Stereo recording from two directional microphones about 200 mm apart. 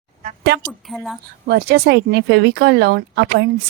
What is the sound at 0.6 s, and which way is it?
Speech, centre (ahead or behind).